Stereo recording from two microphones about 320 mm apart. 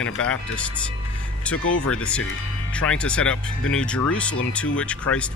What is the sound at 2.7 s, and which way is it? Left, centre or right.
Speech, centre.